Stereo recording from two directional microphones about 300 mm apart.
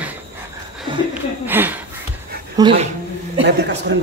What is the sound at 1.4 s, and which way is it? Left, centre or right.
Speech, centre.